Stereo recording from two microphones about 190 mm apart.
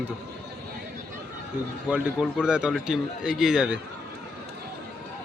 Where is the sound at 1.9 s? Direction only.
5° right (ahead or behind).